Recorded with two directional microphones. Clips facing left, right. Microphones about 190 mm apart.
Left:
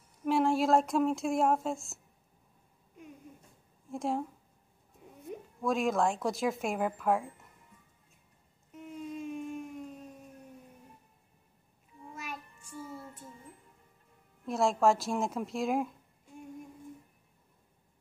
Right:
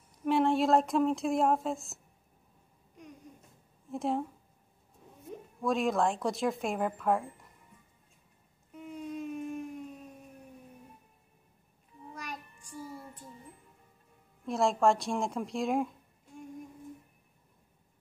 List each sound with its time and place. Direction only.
0.2 s speech: centre (ahead or behind)
3.9 s speech: centre (ahead or behind)
5.6 s speech: centre (ahead or behind)
8.7 s a sound: centre (ahead or behind)
12.1 s child singing: 5° left (ahead or behind)
12.5 s child singing: 15° right (ahead or behind)
14.4 s speech: centre (ahead or behind)